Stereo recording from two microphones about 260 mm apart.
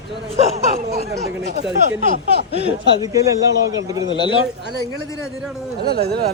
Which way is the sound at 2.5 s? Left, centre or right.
Right.